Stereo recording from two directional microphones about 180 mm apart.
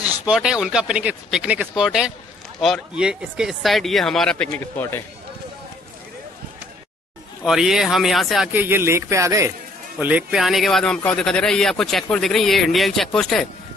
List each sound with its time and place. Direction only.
0.2 s speech: 5° right (ahead or behind); by 5.0 s 10° left (ahead or behind)
7.4 s speech: centre (ahead or behind)
8.5 s speech: 10° right (ahead or behind)